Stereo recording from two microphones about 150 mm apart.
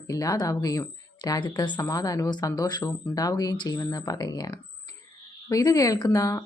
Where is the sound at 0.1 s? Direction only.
20° left (ahead or behind).